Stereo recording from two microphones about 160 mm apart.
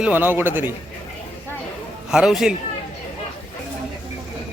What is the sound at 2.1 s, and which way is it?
Speech, 5° right (ahead or behind).